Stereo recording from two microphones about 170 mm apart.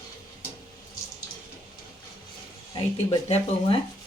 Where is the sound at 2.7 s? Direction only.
35° left (ahead or behind).